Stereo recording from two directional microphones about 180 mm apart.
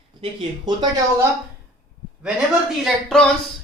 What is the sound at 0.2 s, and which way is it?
Speech, 30° right (ahead or behind).